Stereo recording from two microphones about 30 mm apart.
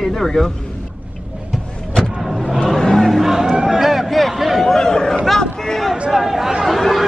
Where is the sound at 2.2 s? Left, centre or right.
Centre.